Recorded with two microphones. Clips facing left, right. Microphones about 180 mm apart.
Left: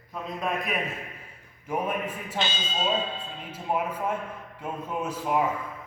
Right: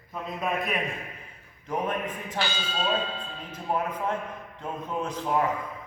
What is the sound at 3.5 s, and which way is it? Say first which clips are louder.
Speech: even; 10° left (ahead or behind).